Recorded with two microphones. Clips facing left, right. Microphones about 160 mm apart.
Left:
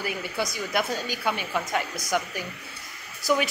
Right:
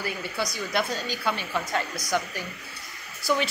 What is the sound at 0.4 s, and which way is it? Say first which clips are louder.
A woman's voice: even; 15° left (ahead or behind).